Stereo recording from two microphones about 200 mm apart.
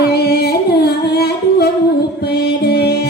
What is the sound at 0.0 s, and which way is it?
Singing, 55° left (ahead or behind).